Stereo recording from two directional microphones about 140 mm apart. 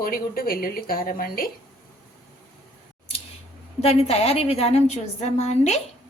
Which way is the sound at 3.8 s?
50° left (ahead or behind).